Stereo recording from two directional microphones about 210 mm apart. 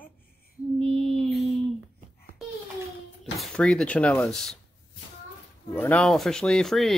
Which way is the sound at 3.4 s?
5° left (ahead or behind).